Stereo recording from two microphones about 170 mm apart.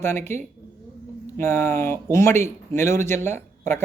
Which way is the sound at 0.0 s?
15° left (ahead or behind).